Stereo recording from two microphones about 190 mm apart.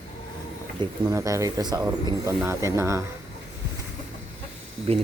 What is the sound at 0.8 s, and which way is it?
Speech, 20° right (ahead or behind).